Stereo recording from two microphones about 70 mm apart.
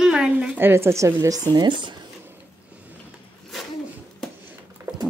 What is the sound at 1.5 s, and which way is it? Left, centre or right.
Speech, right.